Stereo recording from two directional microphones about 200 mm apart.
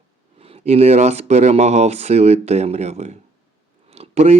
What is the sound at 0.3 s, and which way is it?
Speech, 30° right (ahead or behind).